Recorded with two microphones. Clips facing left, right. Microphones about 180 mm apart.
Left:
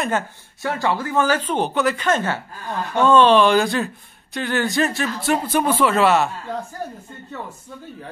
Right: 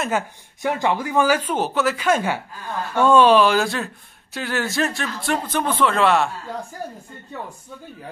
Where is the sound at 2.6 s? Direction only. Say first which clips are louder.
Left 1 dB; 15° left (ahead or behind).